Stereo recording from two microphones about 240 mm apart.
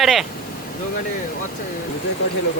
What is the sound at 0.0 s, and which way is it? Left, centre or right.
Speech, centre.